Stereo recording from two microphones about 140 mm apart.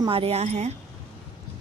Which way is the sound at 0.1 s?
45° right (ahead or behind).